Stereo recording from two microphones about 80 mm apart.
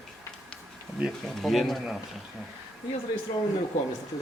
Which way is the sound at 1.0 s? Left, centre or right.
Centre.